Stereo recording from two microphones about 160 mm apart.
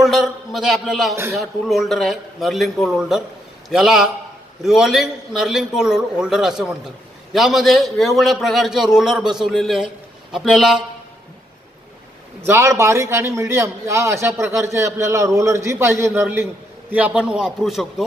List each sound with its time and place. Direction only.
0.0 s a man's voice: centre (ahead or behind)
12.4 s a man's voice: 20° right (ahead or behind); by 18.0 s centre (ahead or behind)